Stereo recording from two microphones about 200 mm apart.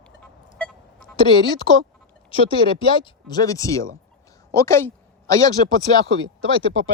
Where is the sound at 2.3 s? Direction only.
25° left (ahead or behind).